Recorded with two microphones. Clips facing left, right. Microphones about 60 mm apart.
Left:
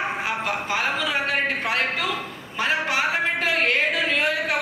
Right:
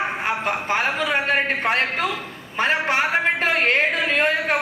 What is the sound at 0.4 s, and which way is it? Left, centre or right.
A man's voice, right.